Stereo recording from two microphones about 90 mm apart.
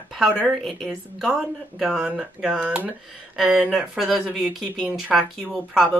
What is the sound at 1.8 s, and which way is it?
Speech, 10° right (ahead or behind).